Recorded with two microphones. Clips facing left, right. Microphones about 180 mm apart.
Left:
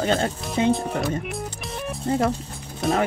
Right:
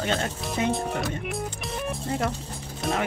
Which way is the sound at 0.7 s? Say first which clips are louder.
Left 5 dB; centre (ahead or behind).